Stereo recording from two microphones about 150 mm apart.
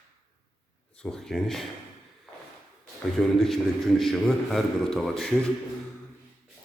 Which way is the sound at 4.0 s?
Centre (ahead or behind).